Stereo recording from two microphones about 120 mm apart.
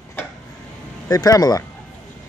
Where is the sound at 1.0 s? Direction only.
30° left (ahead or behind).